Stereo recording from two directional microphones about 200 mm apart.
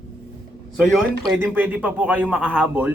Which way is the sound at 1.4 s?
10° right (ahead or behind).